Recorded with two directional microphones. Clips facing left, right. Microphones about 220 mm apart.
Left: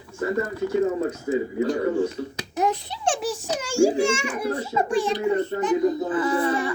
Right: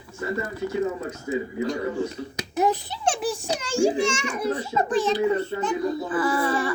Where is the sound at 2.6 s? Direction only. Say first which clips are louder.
Right 1 dB; 5° right (ahead or behind).